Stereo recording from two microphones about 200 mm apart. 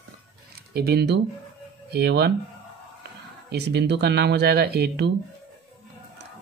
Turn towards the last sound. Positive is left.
turn(degrees=-55)  # may be behind; listen again after turning